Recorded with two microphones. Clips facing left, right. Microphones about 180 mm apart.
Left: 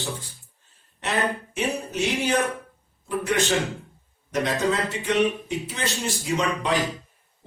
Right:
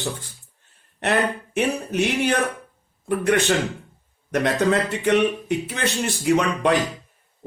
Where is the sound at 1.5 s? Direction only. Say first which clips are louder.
Right 4 dB; 60° right (ahead or behind).